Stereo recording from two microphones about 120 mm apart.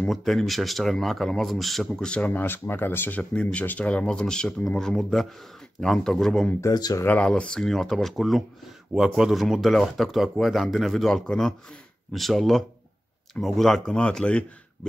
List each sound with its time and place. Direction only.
0.1 s speech: centre (ahead or behind)
6.6 s speech: 35° left (ahead or behind)
7.1 s speech: 10° left (ahead or behind)